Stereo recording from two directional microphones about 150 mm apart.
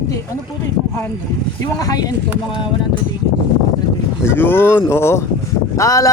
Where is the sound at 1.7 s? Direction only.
25° left (ahead or behind).